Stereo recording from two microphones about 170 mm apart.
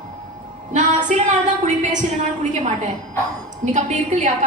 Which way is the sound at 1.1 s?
45° right (ahead or behind).